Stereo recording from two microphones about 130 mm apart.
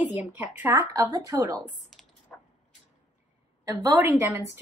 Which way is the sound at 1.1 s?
30° right (ahead or behind).